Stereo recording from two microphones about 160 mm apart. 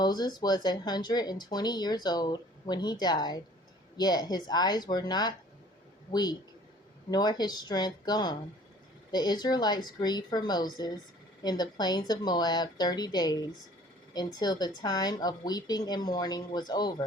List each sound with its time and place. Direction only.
0.0 s speech: 25° left (ahead or behind)